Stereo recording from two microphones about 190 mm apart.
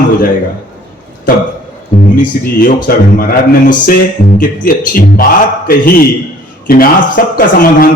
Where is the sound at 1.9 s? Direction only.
40° left (ahead or behind).